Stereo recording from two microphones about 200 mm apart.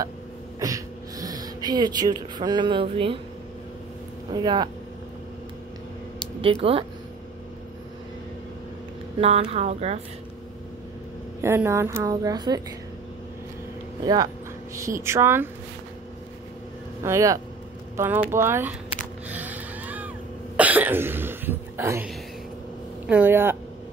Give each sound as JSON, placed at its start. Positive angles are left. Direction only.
{"t": 0.6, "sound": "speech", "side_deg": -15}
{"t": 4.3, "sound": "speech", "side_deg": -20}
{"t": 6.4, "sound": "speech", "side_deg": -30}
{"t": 9.2, "sound": "speech", "side_deg": -30}
{"t": 11.4, "sound": "a woman's voice", "side_deg": -15}
{"t": 14.0, "sound": "a woman's voice", "side_deg": -20}
{"t": 17.0, "sound": "a woman's voice", "side_deg": -15}
{"t": 19.2, "sound": "music", "side_deg": -10}
{"t": 20.5, "sound": "a sound", "side_deg": -10}
{"t": 23.0, "sound": "a woman's voice", "side_deg": -10}